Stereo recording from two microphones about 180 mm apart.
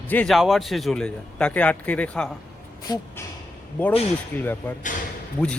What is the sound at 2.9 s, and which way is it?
Speech, 25° left (ahead or behind).